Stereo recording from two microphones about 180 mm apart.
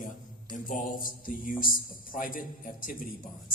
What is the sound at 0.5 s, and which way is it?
A man's voice, 50° left (ahead or behind).